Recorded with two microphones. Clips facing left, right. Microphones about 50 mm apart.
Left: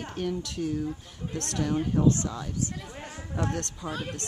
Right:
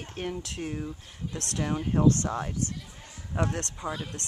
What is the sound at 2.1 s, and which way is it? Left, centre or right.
Speech, right.